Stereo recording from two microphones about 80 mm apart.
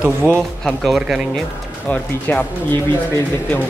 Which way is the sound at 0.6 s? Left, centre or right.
Centre.